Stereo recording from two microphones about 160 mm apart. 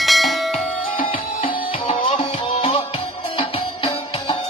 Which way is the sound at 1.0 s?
35° left (ahead or behind).